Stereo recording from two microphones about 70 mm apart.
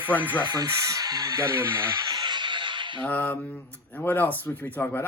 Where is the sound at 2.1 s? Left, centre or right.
Right.